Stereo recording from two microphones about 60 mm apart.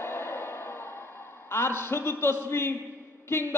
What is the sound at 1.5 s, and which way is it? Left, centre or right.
A man's voice, left.